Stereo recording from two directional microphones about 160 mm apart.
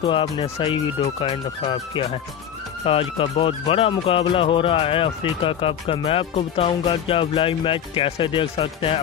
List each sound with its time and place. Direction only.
0.0 s speech: 30° left (ahead or behind)